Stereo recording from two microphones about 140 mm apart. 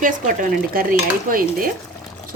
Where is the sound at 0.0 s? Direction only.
80° right.